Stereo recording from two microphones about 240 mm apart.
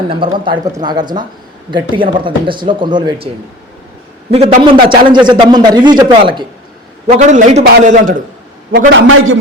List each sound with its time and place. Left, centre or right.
0.1 s a man's voice: right
4.3 s a man's voice: right
7.2 s a man's voice: right
9.0 s a man's voice: right